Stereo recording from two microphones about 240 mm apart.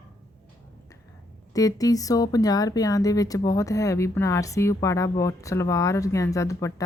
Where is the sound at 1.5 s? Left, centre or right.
Centre.